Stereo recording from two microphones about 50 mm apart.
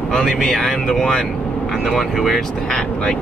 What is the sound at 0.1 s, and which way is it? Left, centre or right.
Speech, centre.